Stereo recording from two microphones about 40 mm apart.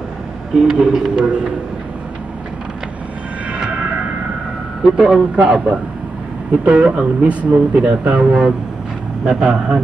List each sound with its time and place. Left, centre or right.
0.7 s speech: centre
1.1 s speech: right
4.9 s speech: right